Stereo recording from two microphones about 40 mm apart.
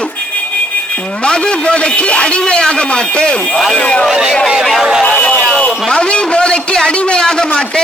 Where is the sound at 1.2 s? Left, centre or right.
Left.